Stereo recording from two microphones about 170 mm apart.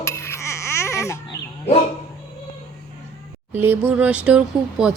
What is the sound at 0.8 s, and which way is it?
Baby cry, 15° left (ahead or behind).